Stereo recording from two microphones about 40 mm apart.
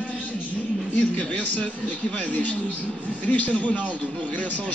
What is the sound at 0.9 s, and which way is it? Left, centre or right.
Speech, left.